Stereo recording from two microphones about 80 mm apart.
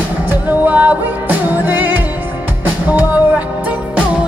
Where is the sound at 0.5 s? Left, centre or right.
Right.